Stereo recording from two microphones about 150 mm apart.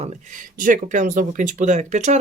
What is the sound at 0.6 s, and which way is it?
Speech, 65° right (ahead or behind).